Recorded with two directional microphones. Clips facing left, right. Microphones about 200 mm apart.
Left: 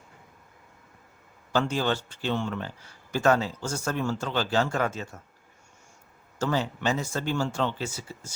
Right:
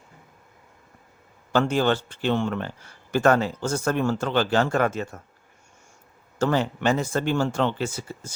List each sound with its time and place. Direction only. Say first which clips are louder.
1.5 s speech: right 5 dB; 60° right (ahead or behind)
6.4 s speech: right 5 dB; 60° right (ahead or behind)